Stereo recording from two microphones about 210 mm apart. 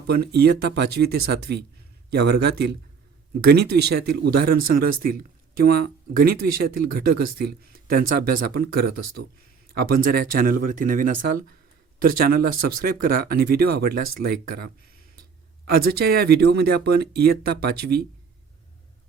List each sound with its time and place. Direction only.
0.1 s speech: 50° right (ahead or behind)